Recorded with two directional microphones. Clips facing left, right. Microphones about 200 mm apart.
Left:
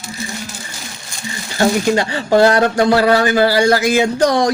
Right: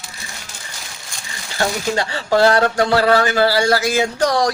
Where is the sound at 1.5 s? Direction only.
15° left (ahead or behind).